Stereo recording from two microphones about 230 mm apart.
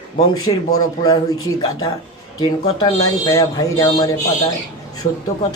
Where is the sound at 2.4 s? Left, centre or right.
Centre.